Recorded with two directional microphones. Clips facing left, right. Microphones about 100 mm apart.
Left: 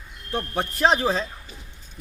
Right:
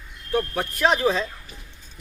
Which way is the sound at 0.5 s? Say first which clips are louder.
Left 4 dB; 30° left (ahead or behind).